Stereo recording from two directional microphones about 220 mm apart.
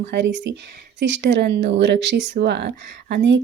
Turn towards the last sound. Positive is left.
turn(degrees=-50)  # may be behind; listen again after turning